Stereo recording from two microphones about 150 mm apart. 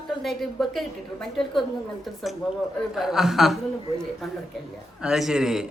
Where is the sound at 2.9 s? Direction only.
Centre (ahead or behind).